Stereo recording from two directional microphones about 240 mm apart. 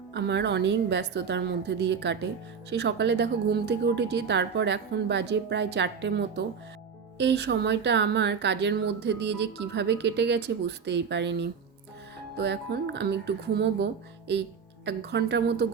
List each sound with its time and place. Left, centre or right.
0.1 s speech: right
14.8 s speech: right